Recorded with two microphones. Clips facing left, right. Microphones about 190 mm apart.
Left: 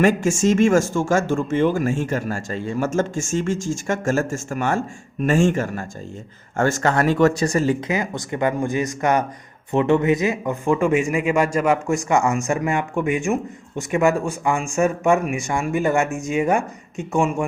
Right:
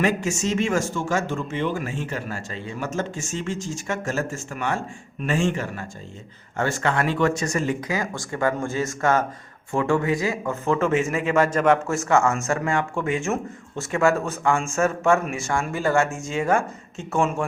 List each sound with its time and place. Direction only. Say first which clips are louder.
0.0 s speech: left 6 dB; 45° left (ahead or behind)
7.9 s a man's voice: left 3 dB; 20° left (ahead or behind)